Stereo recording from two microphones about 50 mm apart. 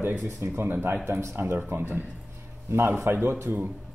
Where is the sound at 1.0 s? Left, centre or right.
Right.